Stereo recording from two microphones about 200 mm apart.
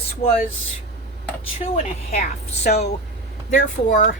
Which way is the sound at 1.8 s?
35° left (ahead or behind).